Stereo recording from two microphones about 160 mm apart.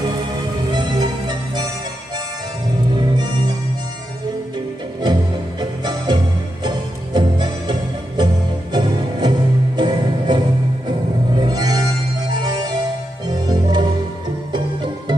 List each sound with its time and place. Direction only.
0.7 s music: 25° right (ahead or behind)
2.9 s music: 25° right (ahead or behind)
5.0 s music: 25° right (ahead or behind)
8.7 s music: 25° right (ahead or behind)